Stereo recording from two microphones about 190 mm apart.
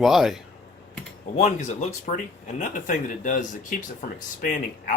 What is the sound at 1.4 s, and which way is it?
Speech, 40° left (ahead or behind).